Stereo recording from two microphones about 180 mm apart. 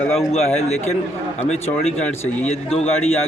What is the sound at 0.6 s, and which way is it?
A man's voice, 35° left (ahead or behind).